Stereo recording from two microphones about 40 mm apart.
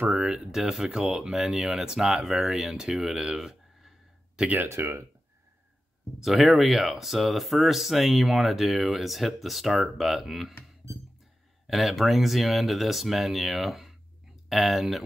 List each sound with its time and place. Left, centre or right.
0.1 s speech: centre
3.3 s a sound: centre
4.8 s speech: right
6.2 s speech: centre
11.6 s speech: centre